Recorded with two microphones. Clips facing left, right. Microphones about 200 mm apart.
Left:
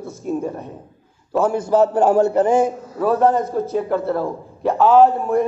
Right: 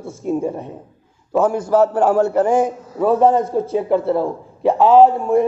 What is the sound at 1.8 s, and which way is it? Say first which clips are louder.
A man's voice: even; 5° right (ahead or behind).